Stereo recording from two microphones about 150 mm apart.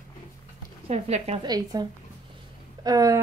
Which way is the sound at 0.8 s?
45° right (ahead or behind).